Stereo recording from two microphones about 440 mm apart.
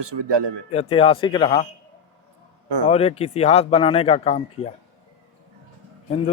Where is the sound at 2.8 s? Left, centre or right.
Centre.